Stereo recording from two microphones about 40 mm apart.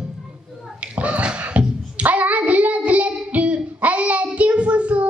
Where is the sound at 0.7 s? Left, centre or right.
Right.